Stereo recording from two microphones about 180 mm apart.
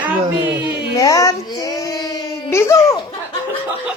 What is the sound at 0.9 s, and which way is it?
Child singing, 20° left (ahead or behind).